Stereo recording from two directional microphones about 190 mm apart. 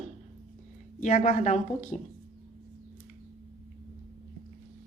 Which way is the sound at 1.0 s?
40° left (ahead or behind).